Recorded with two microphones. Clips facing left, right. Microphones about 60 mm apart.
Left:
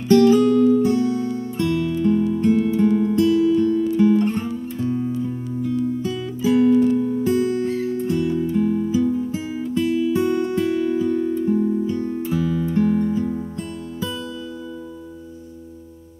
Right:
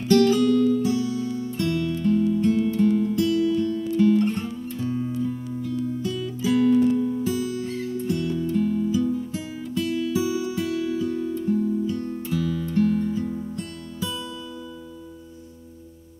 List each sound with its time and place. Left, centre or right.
0.1 s music: left
0.8 s music: left
1.5 s music: centre
10.2 s music: left